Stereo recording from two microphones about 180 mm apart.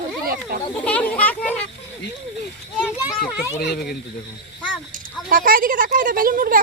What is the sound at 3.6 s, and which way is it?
Speech, 60° left (ahead or behind).